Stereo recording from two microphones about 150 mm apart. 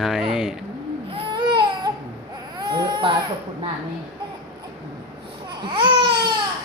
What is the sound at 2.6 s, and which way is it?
Speech, 30° right (ahead or behind).